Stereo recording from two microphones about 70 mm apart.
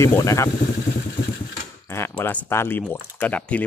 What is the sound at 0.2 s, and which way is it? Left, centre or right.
Speech, left.